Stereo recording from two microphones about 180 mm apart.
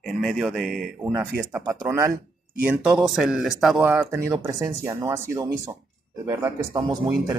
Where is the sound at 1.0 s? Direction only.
10° right (ahead or behind).